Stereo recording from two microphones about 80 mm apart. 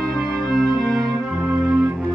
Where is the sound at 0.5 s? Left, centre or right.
Centre.